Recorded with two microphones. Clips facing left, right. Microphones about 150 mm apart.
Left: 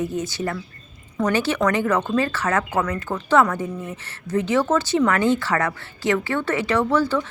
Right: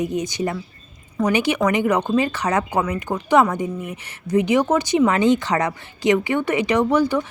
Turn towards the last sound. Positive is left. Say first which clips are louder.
# right 2 dB
turn(degrees=-15)  # may be behind; listen again after turning